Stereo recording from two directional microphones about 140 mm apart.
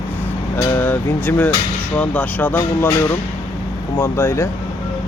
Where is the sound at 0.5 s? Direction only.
15° left (ahead or behind).